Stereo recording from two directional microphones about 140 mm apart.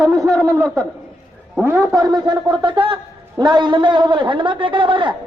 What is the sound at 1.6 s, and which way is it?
Speech, 15° right (ahead or behind).